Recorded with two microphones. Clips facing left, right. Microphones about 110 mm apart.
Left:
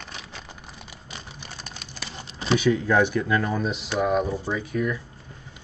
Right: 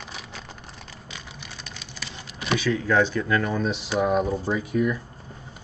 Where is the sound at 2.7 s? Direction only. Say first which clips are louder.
Left 1 dB; 15° left (ahead or behind); by 5.0 s 5° right (ahead or behind).